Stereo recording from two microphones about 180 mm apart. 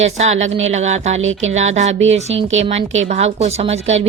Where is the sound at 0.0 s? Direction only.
40° right (ahead or behind).